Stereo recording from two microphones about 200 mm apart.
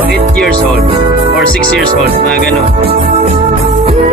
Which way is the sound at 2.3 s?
Centre (ahead or behind).